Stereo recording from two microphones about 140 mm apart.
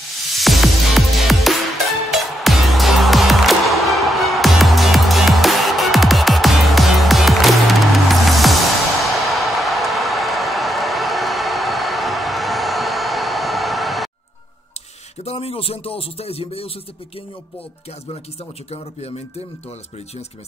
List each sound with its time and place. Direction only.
0.3 s music: centre (ahead or behind)
9.1 s a sound: centre (ahead or behind)
15.2 s speech: 45° left (ahead or behind)
18.7 s a man's voice: 45° left (ahead or behind)